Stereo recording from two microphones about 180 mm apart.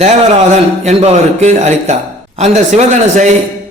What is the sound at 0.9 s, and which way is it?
A man's voice, 40° right (ahead or behind).